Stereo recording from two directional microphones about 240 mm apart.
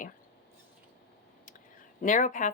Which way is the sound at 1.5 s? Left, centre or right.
Left.